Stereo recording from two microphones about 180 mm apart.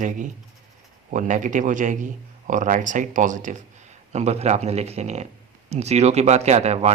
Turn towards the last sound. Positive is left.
turn(degrees=-35)  # may be behind; listen again after turning